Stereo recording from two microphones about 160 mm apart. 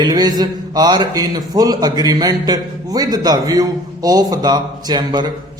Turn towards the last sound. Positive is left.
turn(degrees=-25)  # may be behind; listen again after turning